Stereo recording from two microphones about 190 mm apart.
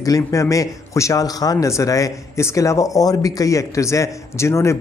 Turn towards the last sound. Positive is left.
turn(degrees=15)  # may be behind; listen again after turning